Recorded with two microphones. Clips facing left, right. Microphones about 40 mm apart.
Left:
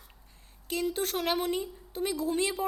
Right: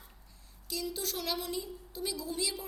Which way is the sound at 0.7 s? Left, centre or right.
Left.